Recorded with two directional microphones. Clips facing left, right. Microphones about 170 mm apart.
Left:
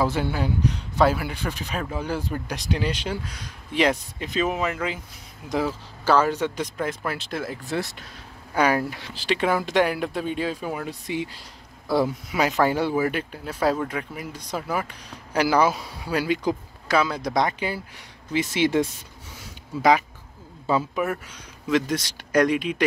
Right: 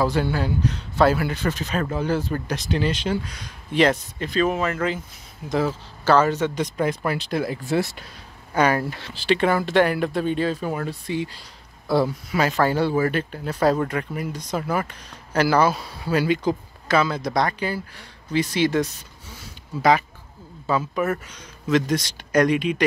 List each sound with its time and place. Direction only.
0.0 s speech: 20° left (ahead or behind)
6.8 s speech: centre (ahead or behind)
8.5 s speech: 10° left (ahead or behind)
10.9 s speech: 20° left (ahead or behind)
19.8 s speech: 15° left (ahead or behind)